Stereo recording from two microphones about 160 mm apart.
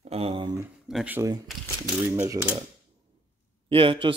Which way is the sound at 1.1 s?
20° right (ahead or behind).